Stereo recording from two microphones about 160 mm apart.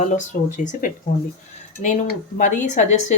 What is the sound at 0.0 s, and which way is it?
Speech, 50° left (ahead or behind).